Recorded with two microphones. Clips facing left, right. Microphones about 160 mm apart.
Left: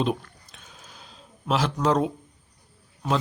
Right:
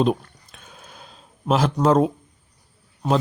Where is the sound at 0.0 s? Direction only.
45° right (ahead or behind).